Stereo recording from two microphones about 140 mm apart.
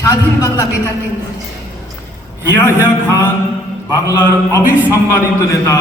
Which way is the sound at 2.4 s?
15° right (ahead or behind).